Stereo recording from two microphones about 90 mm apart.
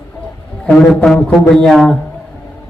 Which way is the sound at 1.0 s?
15° left (ahead or behind).